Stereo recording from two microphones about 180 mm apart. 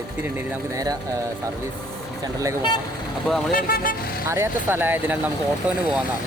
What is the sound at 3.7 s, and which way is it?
Speech, 55° left (ahead or behind).